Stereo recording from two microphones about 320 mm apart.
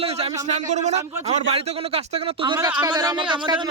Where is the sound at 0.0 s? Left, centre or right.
Centre.